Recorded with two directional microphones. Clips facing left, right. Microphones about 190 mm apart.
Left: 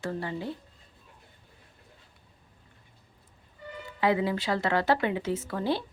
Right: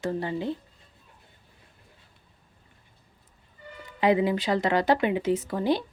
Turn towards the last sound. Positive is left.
turn(degrees=-15)  # may be behind; listen again after turning